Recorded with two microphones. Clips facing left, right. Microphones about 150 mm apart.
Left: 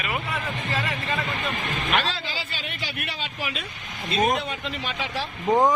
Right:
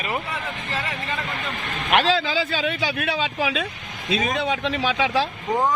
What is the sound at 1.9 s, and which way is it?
Speech, 90° right.